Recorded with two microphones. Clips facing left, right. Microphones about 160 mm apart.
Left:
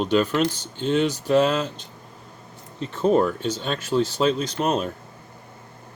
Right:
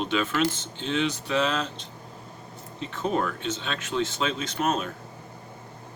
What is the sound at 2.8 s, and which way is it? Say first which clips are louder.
Speech: left 8 dB; 40° left (ahead or behind).